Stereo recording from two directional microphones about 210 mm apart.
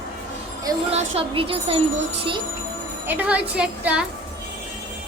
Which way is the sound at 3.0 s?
5° right (ahead or behind).